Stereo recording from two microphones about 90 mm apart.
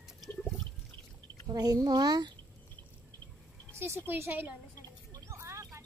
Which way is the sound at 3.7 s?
25° right (ahead or behind).